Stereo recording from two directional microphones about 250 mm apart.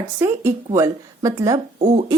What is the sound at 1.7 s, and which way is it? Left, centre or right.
Speech, right.